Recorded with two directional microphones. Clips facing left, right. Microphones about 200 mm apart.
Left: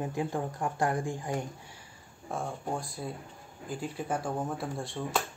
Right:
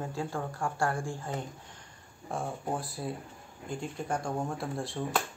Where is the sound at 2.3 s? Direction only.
Centre (ahead or behind).